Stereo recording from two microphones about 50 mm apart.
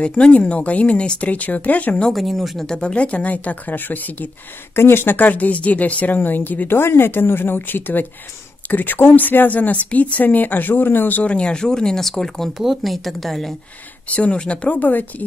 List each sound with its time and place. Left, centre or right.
0.2 s speech: left
2.1 s a woman's voice: centre
2.7 s speech: centre; by 4.3 s left
4.7 s speech: left
6.8 s a woman's voice: left
11.2 s a woman's voice: left; by 13.5 s centre
14.0 s speech: left